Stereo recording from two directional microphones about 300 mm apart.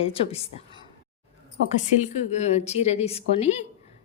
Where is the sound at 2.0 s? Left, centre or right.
Left.